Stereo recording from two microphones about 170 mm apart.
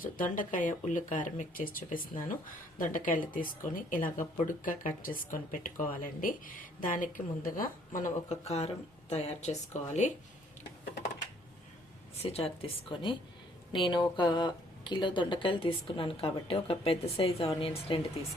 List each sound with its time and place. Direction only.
0.0 s a woman's voice: 50° left (ahead or behind)
12.2 s speech: 35° left (ahead or behind)